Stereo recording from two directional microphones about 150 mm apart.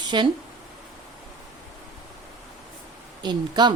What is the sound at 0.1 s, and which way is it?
Speech, 30° right (ahead or behind).